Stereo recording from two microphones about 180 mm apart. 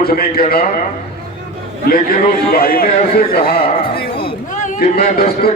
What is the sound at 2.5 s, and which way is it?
Speech, 55° left (ahead or behind).